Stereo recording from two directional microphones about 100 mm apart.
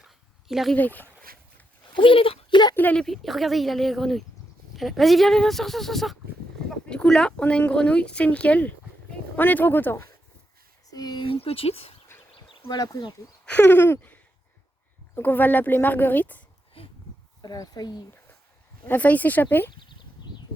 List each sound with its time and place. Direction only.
0.0 s dog: 5° right (ahead or behind)
0.8 s speech: 15° left (ahead or behind)
2.0 s a child's voice: 65° left (ahead or behind)
2.7 s speech: 15° left (ahead or behind)
3.0 s speech: centre (ahead or behind); by 10.1 s 20° left (ahead or behind)
10.9 s speech: 45° left (ahead or behind)
11.3 s speech: 75° left (ahead or behind)
12.5 s speech: 50° left (ahead or behind)
13.4 s a sound: 15° left (ahead or behind)
15.1 s speech: 20° left (ahead or behind)
17.4 s speech: 40° left (ahead or behind)
18.9 s speech: 15° left (ahead or behind)